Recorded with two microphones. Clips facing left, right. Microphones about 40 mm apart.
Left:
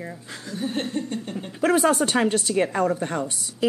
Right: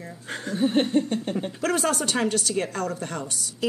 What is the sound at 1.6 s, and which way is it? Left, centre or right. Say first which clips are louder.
A woman's voice: left 7 dB; centre.